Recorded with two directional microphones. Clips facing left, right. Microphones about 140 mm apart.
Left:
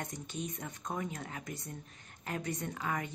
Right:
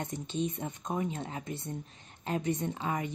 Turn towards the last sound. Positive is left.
turn(degrees=-25)  # may be behind; listen again after turning